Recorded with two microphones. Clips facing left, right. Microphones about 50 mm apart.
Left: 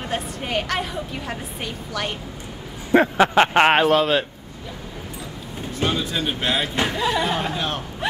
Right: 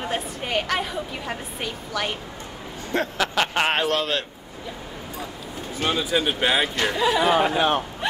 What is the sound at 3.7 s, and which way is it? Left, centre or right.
Speech, centre.